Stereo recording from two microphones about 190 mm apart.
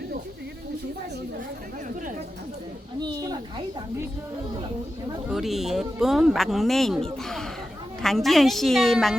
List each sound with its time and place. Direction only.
3.0 s children playing: 20° right (ahead or behind)
5.3 s speech: centre (ahead or behind)